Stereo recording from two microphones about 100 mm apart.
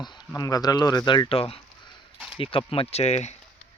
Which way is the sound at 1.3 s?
75° left (ahead or behind).